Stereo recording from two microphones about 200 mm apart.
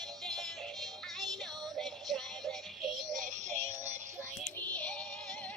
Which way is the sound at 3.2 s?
40° right (ahead or behind).